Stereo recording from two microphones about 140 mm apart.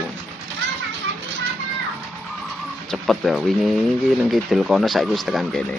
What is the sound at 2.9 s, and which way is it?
Speech, centre (ahead or behind).